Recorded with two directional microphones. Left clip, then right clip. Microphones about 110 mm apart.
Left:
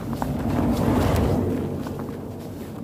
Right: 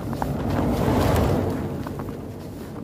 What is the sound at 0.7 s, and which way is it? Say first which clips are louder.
Boat: right 1 dB; 80° right.